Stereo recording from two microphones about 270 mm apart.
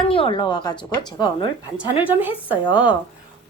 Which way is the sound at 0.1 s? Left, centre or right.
Centre.